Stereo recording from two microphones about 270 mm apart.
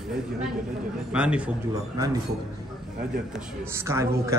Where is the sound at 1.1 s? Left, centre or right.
Centre.